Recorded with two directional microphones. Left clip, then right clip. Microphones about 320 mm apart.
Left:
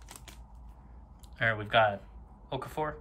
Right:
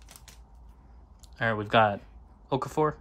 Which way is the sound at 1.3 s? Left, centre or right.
Centre.